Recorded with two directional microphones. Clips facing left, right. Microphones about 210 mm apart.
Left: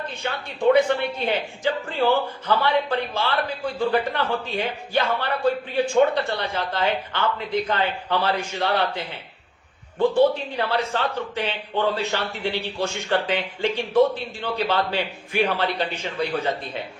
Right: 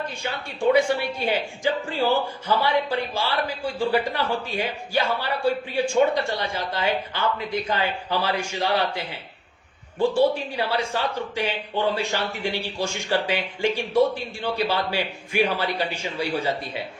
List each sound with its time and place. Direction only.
0.1 s a man's voice: 10° right (ahead or behind)